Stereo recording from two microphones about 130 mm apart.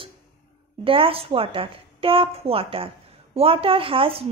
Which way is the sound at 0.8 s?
45° right (ahead or behind).